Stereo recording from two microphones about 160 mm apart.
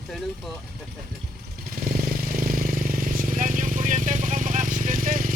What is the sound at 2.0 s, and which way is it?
Vehicle, 60° right (ahead or behind).